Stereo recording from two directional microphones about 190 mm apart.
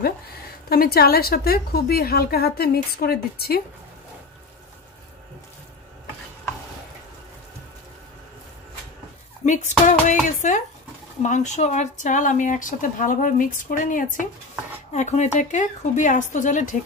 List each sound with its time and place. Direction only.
0.7 s a woman's voice: 55° left (ahead or behind)
9.5 s speech: 40° left (ahead or behind)